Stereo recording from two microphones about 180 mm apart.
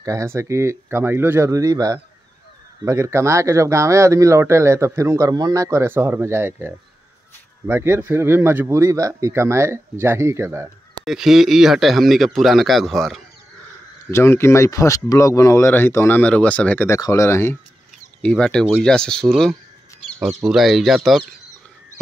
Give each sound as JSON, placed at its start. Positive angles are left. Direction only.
{"t": 0.0, "sound": "speech", "side_deg": -15}
{"t": 11.1, "sound": "a man's voice", "side_deg": 0}
{"t": 14.1, "sound": "a man's voice", "side_deg": 15}
{"t": 20.1, "sound": "bird", "side_deg": 0}
{"t": 20.3, "sound": "a man's voice", "side_deg": 0}